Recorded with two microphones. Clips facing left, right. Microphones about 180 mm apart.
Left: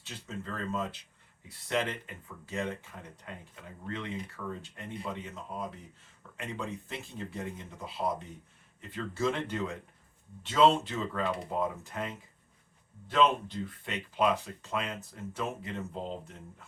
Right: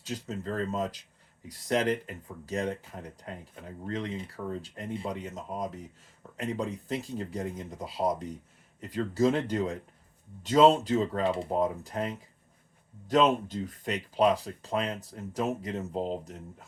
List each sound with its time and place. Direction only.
0.0 s speech: 40° right (ahead or behind)